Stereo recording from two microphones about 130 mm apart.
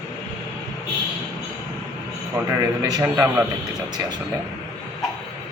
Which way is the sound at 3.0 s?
15° right (ahead or behind).